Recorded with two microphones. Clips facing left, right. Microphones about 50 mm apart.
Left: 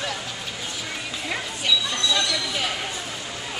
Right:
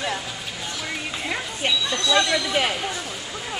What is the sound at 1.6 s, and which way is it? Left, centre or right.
Speech, right.